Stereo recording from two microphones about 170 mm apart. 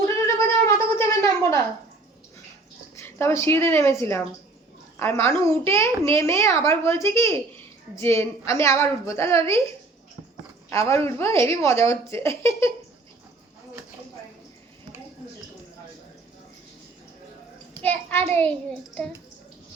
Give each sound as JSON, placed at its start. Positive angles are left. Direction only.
{"t": 0.0, "sound": "cat", "side_deg": 15}
{"t": 2.9, "sound": "a woman's voice", "side_deg": 15}
{"t": 10.7, "sound": "a woman's voice", "side_deg": 15}
{"t": 17.8, "sound": "a woman's voice", "side_deg": 15}